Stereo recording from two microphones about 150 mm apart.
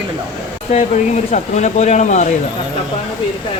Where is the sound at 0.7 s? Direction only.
50° left (ahead or behind).